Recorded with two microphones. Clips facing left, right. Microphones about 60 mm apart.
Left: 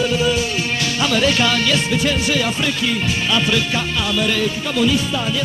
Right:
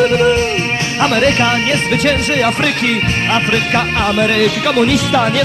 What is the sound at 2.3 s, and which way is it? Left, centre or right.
Music, right.